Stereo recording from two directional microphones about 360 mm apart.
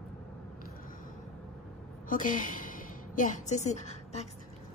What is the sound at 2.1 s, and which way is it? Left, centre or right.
A woman's voice, left.